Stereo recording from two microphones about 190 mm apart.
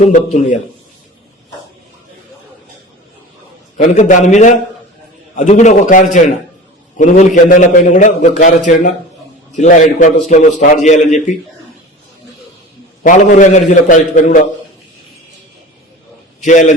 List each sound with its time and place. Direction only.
0.0 s a man's voice: 40° left (ahead or behind)
3.8 s a man's voice: 40° left (ahead or behind)
13.0 s a man's voice: 45° left (ahead or behind)
16.4 s a man's voice: 40° left (ahead or behind)